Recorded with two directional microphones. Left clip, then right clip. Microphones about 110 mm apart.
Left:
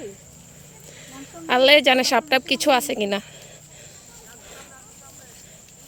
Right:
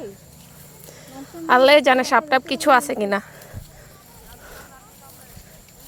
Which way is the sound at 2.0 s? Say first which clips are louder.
Right 2 dB; 40° left (ahead or behind).